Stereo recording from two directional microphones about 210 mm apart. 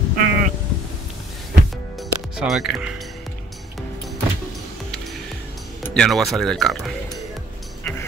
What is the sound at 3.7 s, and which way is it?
Music, centre (ahead or behind).